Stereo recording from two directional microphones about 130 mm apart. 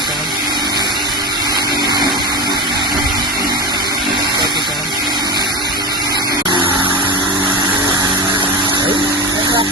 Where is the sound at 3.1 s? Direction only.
35° right (ahead or behind).